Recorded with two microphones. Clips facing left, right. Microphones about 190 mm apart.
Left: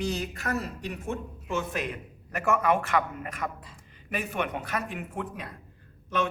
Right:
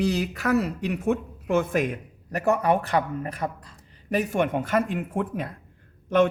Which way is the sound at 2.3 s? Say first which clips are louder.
Right 3 dB; 35° right (ahead or behind).